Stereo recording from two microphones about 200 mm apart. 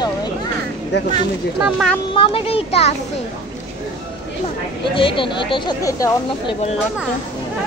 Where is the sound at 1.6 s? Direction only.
Centre (ahead or behind).